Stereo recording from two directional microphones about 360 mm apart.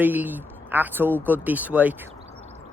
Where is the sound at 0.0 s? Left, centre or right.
Centre.